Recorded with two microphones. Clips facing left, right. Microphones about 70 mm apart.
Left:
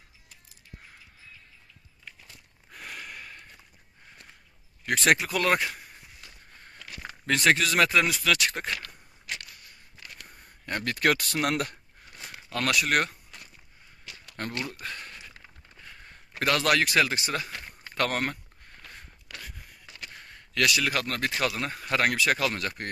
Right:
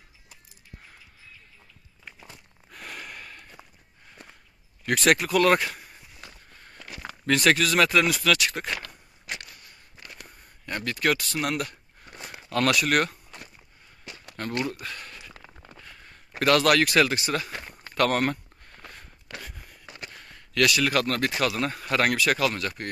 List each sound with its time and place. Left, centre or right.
2.0 s walk: right
2.7 s a sound: centre
4.8 s speech: centre
7.2 s speech: centre
8.8 s a sound: right
10.6 s speech: left
12.5 s speech: centre
12.8 s speech: centre
14.4 s speech: left
14.8 s a sound: left
16.4 s speech: centre
18.1 s speech: centre
20.2 s speech: centre